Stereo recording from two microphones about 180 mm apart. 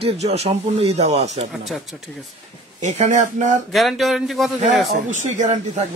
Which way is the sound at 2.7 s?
40° right (ahead or behind).